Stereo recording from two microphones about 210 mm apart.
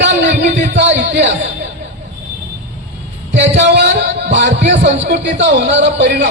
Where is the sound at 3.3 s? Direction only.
55° right (ahead or behind).